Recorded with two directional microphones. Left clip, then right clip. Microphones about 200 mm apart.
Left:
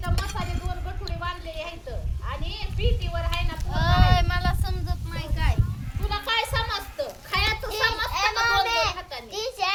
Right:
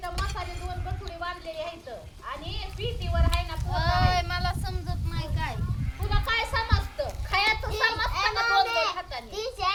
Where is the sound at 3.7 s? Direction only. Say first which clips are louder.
Left 2 dB; 25° left (ahead or behind).